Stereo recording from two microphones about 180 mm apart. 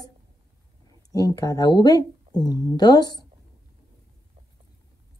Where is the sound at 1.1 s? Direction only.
20° left (ahead or behind).